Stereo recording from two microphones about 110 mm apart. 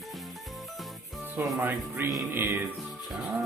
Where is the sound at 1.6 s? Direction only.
20° right (ahead or behind).